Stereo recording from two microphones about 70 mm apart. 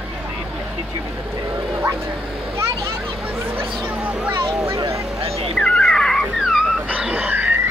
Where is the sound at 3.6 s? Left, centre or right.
Right.